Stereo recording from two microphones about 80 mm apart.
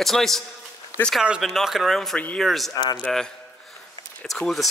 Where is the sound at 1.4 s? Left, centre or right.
Centre.